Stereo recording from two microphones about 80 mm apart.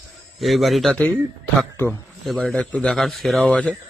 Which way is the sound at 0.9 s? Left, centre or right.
Centre.